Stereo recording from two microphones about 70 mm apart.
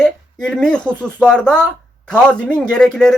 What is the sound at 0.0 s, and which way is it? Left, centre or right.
Speech, centre.